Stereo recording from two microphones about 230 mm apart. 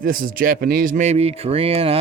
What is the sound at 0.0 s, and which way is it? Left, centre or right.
Speech, right.